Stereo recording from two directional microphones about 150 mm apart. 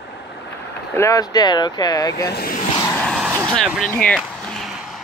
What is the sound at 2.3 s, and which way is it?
Speech, 90° left.